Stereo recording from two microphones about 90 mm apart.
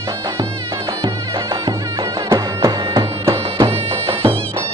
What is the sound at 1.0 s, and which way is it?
Music, 45° right (ahead or behind).